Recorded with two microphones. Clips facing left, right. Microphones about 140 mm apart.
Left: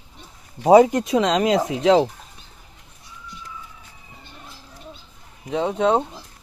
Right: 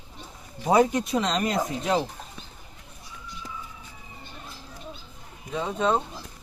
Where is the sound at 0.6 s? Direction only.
85° left.